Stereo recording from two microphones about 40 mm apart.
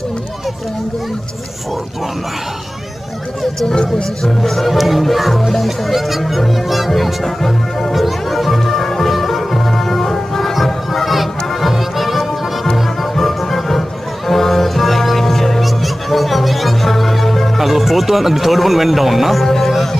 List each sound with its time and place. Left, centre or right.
3.6 s speech: centre
4.4 s speech: centre
6.9 s music: centre